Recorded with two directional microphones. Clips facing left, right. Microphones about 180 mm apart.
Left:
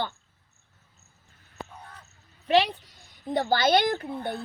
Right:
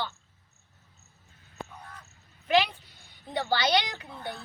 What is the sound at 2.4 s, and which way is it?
A woman's voice, 35° left (ahead or behind).